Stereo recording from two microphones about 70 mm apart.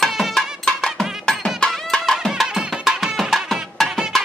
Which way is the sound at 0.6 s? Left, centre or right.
Centre.